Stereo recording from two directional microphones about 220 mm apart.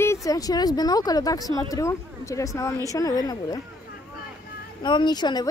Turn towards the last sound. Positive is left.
turn(degrees=20)  # may be behind; listen again after turning